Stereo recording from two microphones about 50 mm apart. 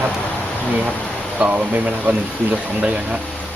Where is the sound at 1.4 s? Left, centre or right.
Right.